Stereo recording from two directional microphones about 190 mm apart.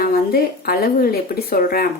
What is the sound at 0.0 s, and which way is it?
A woman's voice, 50° left (ahead or behind).